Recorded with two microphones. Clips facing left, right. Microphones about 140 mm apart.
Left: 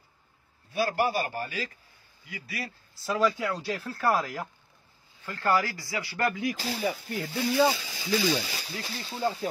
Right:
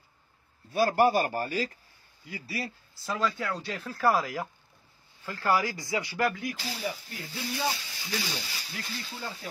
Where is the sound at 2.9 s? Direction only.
5° left (ahead or behind).